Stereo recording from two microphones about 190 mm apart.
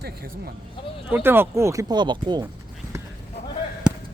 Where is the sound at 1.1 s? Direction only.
10° right (ahead or behind).